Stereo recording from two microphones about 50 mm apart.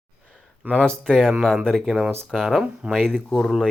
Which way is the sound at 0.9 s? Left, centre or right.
Centre.